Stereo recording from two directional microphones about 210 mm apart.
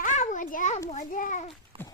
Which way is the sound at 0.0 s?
35° left (ahead or behind).